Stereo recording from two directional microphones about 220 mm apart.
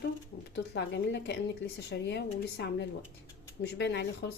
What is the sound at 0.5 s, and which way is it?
Speech, 50° left (ahead or behind).